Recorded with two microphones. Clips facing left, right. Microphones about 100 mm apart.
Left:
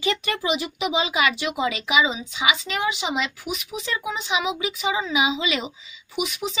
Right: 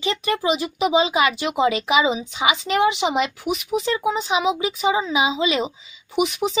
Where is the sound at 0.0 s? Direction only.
30° right (ahead or behind).